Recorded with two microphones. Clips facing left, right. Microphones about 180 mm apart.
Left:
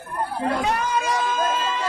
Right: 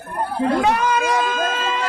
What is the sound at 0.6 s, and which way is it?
Speech, 80° right.